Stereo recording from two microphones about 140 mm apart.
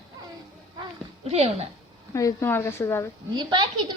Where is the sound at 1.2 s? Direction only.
50° right (ahead or behind).